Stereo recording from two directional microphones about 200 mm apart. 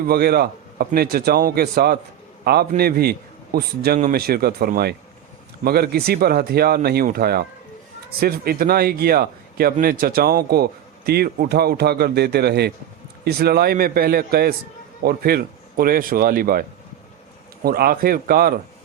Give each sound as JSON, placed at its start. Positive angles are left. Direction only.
{"t": 0.0, "sound": "a man's voice", "side_deg": -50}